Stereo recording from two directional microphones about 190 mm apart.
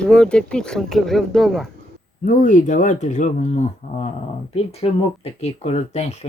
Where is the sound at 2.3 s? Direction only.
40° left (ahead or behind).